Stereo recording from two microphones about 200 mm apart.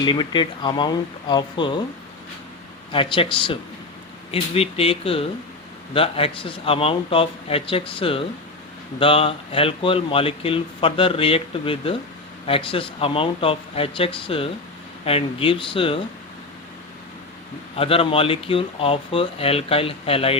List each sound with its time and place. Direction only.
0.0 s speech: 20° left (ahead or behind)
2.9 s speech: 25° left (ahead or behind)
17.7 s speech: 30° left (ahead or behind)